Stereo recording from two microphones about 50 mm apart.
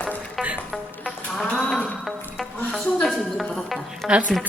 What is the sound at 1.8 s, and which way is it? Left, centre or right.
Music, left.